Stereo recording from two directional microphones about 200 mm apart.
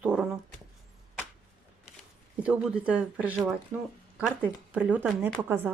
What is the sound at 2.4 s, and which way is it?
Speech, 5° right (ahead or behind).